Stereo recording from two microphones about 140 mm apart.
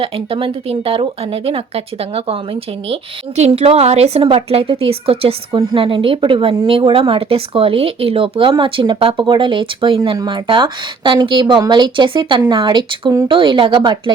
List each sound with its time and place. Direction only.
0.0 s a woman's voice: 40° right (ahead or behind)